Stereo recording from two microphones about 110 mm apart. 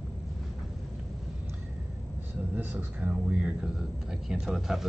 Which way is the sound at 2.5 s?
20° right (ahead or behind).